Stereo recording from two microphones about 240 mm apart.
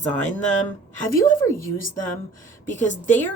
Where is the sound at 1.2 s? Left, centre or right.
Left.